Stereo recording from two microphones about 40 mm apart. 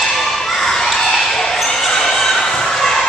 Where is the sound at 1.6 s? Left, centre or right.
Centre.